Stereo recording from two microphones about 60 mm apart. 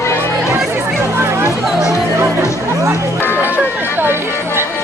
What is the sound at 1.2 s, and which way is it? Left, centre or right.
Chatter, right.